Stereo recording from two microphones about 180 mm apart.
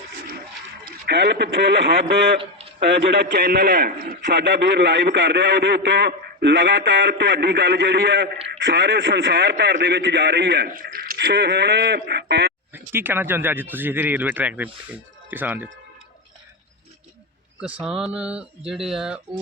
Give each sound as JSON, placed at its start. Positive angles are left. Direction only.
{"t": 1.0, "sound": "a man's voice", "side_deg": -70}
{"t": 2.4, "sound": "a sound", "side_deg": -35}
{"t": 3.1, "sound": "a man's voice", "side_deg": -70}
{"t": 11.3, "sound": "a man's voice", "side_deg": -70}
{"t": 12.7, "sound": "speech", "side_deg": -10}
{"t": 17.6, "sound": "speech", "side_deg": -5}